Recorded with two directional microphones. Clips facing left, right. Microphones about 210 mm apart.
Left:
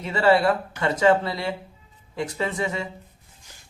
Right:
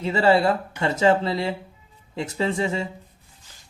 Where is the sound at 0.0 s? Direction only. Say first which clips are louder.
Right 1 dB; 25° right (ahead or behind).